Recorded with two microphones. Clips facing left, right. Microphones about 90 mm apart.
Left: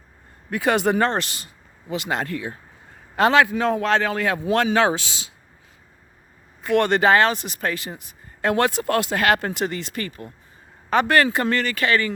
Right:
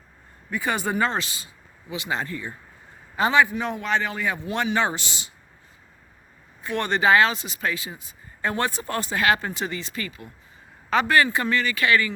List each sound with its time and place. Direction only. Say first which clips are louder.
0.5 s speech: left 6 dB; 85° left
0.9 s speech: left 3 dB; 60° left (ahead or behind)
3.2 s a man's voice: left 3 dB; 90° left
6.7 s speech: left 4 dB; 60° left (ahead or behind)
7.9 s speech: left 3 dB; 70° left (ahead or behind)
11.8 s speech: even; 25° left (ahead or behind)